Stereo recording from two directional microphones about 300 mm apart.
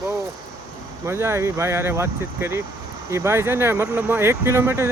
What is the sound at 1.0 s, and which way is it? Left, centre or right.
Speech, centre.